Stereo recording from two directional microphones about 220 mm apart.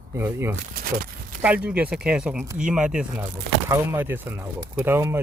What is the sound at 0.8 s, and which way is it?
Speech, 40° right (ahead or behind).